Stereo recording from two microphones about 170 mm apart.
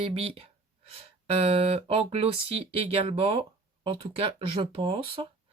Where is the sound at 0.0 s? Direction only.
35° right (ahead or behind).